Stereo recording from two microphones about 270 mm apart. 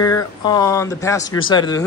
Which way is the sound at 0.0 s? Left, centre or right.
Centre.